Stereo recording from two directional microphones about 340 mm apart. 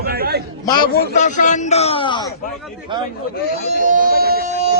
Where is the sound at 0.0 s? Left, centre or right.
Right.